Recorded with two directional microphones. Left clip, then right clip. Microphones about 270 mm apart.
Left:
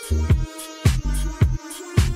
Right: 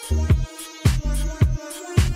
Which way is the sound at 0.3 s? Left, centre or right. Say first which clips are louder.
Even; right.